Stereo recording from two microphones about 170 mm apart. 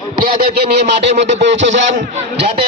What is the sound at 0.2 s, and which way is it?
Speech, 60° right (ahead or behind).